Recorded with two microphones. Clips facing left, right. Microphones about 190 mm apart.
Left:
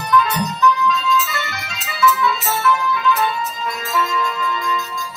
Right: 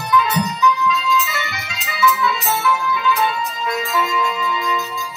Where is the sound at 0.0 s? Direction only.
Centre (ahead or behind).